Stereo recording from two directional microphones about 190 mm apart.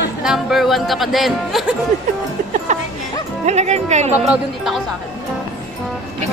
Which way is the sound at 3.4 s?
35° right (ahead or behind).